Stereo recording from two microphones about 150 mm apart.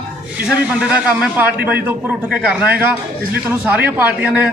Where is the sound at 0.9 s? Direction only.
10° right (ahead or behind).